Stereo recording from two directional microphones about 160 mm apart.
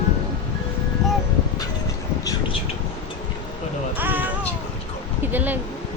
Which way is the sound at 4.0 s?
10° right (ahead or behind).